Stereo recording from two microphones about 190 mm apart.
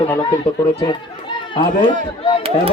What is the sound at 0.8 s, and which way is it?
Speech, 25° left (ahead or behind).